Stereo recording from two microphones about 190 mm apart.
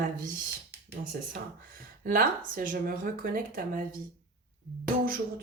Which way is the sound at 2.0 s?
45° right (ahead or behind).